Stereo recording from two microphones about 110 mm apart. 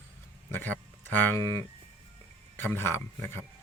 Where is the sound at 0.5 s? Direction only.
15° left (ahead or behind).